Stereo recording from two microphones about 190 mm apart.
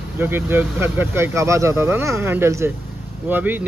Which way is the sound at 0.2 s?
10° right (ahead or behind).